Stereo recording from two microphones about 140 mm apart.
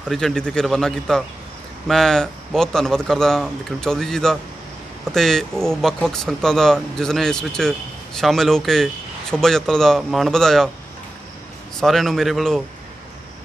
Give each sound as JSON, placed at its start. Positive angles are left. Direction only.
{"t": 0.1, "sound": "speech", "side_deg": 5}
{"t": 11.8, "sound": "speech", "side_deg": 0}